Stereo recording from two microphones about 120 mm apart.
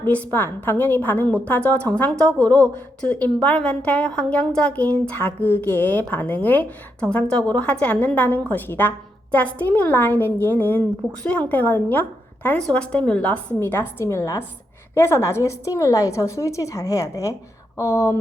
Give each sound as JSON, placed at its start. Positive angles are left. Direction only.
{"t": 0.0, "sound": "a woman's voice", "side_deg": 15}
{"t": 2.4, "sound": "speech", "side_deg": -30}
{"t": 3.0, "sound": "a woman's voice", "side_deg": 10}